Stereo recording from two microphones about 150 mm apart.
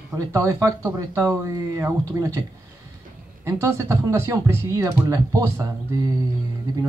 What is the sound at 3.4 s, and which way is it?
Speech, 20° right (ahead or behind).